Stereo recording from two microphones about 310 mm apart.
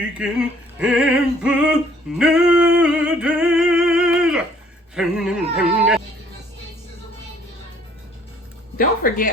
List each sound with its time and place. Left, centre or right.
0.2 s a sound: centre
4.9 s speech: centre
8.8 s speech: left